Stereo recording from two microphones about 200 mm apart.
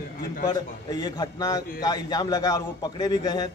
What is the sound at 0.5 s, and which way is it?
A man's voice, 20° left (ahead or behind).